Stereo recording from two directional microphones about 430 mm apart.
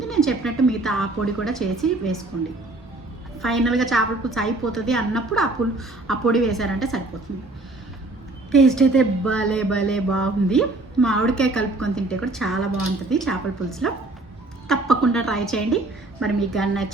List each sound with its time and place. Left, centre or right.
0.1 s speech: centre
3.4 s speech: centre
8.5 s speech: centre